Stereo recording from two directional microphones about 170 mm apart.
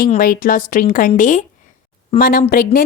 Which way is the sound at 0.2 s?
55° left (ahead or behind).